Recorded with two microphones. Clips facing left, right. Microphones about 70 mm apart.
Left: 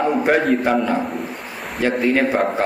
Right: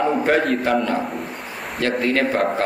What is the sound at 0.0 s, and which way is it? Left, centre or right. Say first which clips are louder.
A man's voice: left 1 dB; centre.